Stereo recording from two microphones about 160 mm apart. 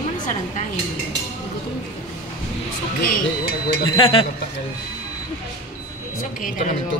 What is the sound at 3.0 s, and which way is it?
Speech, 60° left (ahead or behind).